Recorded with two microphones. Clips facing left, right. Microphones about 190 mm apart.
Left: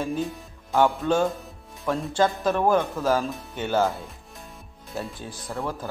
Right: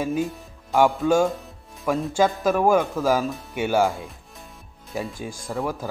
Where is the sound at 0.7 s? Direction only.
5° right (ahead or behind).